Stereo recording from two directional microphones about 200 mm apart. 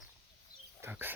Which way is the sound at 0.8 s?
10° right (ahead or behind).